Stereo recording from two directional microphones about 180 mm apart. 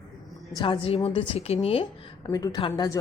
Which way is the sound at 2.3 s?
20° left (ahead or behind).